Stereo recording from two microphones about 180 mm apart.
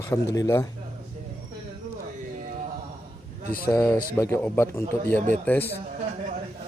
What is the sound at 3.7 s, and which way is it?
A man's voice, 15° left (ahead or behind).